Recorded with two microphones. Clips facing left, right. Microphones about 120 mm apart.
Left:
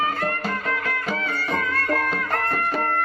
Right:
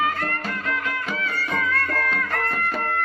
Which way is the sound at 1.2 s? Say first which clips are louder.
Left 1 dB; 35° left (ahead or behind).